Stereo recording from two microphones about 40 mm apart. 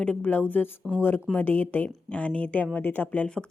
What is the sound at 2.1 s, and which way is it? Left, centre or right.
Speech, left.